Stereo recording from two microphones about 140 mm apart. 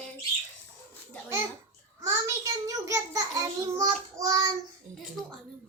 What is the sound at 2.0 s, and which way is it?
A child's voice, 20° right (ahead or behind).